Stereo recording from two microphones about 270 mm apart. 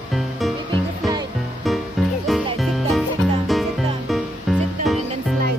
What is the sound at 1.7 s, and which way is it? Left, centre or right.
Music, centre.